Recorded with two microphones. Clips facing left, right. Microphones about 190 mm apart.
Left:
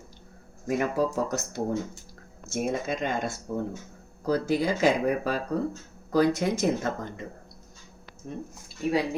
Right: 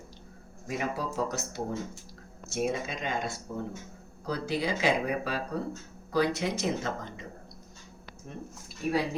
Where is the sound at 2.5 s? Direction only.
50° left (ahead or behind).